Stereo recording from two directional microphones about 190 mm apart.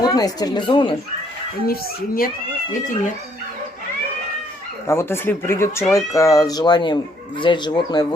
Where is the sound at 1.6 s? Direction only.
50° left (ahead or behind).